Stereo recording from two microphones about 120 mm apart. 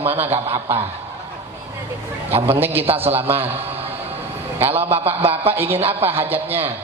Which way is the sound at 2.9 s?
15° right (ahead or behind).